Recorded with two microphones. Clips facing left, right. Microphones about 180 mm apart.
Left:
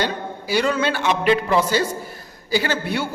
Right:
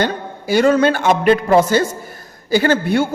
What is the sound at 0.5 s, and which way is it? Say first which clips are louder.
A man's voice: right 7 dB; 45° right (ahead or behind).